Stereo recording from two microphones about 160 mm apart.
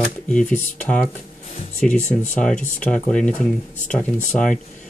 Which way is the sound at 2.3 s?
5° left (ahead or behind).